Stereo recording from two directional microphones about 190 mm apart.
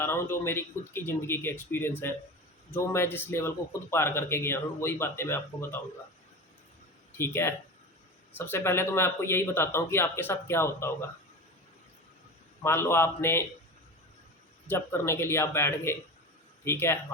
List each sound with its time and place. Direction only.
0.0 s speech: 10° left (ahead or behind)
7.2 s speech: 15° left (ahead or behind)
12.6 s speech: 15° left (ahead or behind)
14.7 s speech: 15° left (ahead or behind)